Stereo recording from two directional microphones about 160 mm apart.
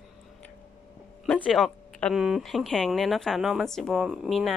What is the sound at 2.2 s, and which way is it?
Speech, centre (ahead or behind).